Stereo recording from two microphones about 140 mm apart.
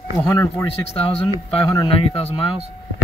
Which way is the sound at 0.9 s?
45° left (ahead or behind).